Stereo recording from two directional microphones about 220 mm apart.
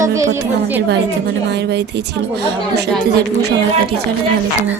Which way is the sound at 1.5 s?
50° right (ahead or behind).